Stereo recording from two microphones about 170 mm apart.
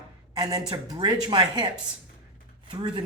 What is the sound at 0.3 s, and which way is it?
Speech, 25° right (ahead or behind).